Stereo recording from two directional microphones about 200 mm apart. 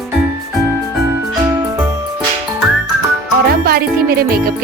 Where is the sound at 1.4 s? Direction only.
15° right (ahead or behind).